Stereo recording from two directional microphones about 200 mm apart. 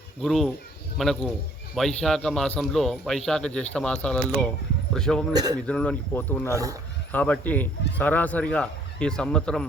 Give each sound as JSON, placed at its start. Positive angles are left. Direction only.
{"t": 0.2, "sound": "speech", "side_deg": 0}
{"t": 5.3, "sound": "speech", "side_deg": -20}
{"t": 5.6, "sound": "speech", "side_deg": 5}